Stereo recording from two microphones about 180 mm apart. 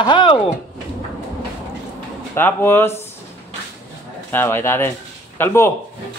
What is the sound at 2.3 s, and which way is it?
Speech, 10° left (ahead or behind).